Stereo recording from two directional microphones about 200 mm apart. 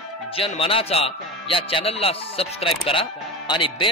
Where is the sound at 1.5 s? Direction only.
25° left (ahead or behind).